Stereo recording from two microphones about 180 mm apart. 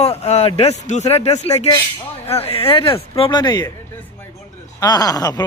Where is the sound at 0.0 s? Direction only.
35° left (ahead or behind).